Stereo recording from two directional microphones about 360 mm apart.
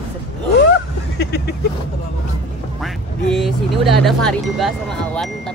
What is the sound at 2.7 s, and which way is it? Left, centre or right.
Speech, centre.